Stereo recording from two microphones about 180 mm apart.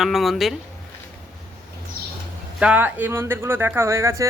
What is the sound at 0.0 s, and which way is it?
Speech, centre (ahead or behind).